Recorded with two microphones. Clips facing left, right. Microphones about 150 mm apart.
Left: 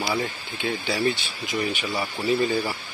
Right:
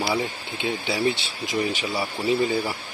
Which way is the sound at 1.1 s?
75° right (ahead or behind).